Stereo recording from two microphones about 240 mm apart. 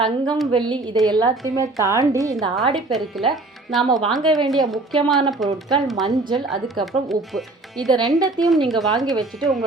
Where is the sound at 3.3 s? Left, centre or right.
Centre.